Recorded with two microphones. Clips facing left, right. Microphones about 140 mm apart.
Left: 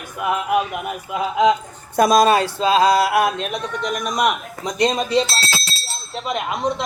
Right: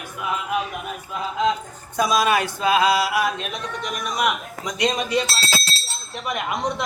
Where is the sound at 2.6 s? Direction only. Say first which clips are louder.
Left 2 dB; 25° left (ahead or behind).